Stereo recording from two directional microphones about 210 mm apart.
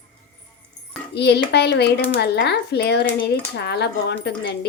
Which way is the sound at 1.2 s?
50° left (ahead or behind).